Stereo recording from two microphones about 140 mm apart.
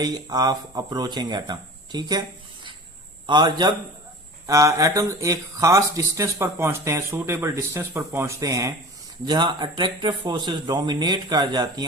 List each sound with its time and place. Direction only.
0.0 s speech: 30° right (ahead or behind)
3.2 s speech: 35° right (ahead or behind)